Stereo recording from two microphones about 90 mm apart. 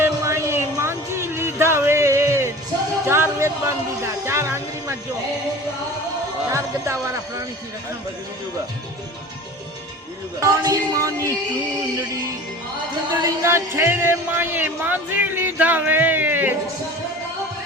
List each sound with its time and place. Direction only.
0.0 s music: 30° right (ahead or behind)
3.1 s speech: 30° right (ahead or behind)
6.5 s speech: 35° right (ahead or behind)
10.4 s music: 45° right (ahead or behind)
13.2 s speech: 30° right (ahead or behind)